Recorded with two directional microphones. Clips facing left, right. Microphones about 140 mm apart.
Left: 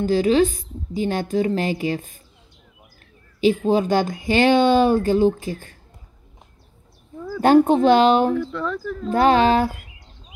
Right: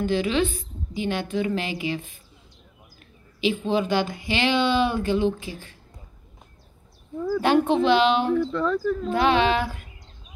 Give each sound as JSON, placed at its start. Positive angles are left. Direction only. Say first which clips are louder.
{"t": 0.0, "sound": "a woman's voice", "louder": "left 6 dB", "side_deg": 40}
{"t": 3.6, "sound": "speech", "louder": "left 4 dB", "side_deg": 40}
{"t": 7.4, "sound": "speech", "louder": "left 6 dB", "side_deg": 45}
{"t": 8.4, "sound": "speech", "louder": "right 2 dB", "side_deg": 0}
{"t": 9.1, "sound": "a woman's voice", "louder": "left 6 dB", "side_deg": 40}